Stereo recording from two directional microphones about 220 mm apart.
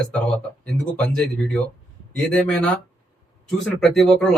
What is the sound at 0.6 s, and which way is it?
Speech, 5° left (ahead or behind).